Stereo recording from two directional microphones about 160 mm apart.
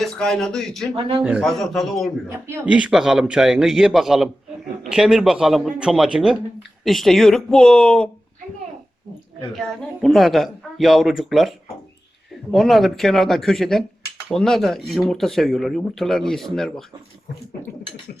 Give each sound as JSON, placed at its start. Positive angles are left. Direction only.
{"t": 0.0, "sound": "speech", "side_deg": 5}
{"t": 0.9, "sound": "speech", "side_deg": -35}
{"t": 1.2, "sound": "a man's voice", "side_deg": -5}
{"t": 9.6, "sound": "a man's voice", "side_deg": 0}